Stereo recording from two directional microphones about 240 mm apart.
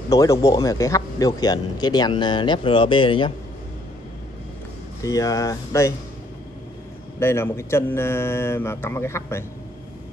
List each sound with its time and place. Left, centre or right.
0.1 s a man's voice: centre
5.0 s a man's voice: centre
7.2 s a man's voice: centre